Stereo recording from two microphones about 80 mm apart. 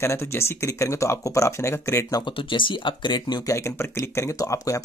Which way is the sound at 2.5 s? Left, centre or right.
Left.